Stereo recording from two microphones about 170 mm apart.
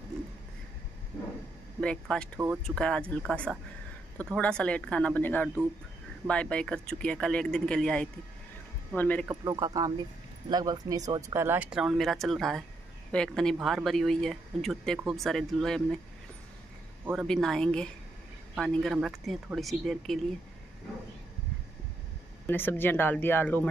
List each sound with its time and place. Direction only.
1.8 s speech: 5° left (ahead or behind)
9.3 s a man's voice: 20° right (ahead or behind); by 16.0 s 5° left (ahead or behind)
17.1 s speech: centre (ahead or behind)
22.5 s speech: 10° left (ahead or behind)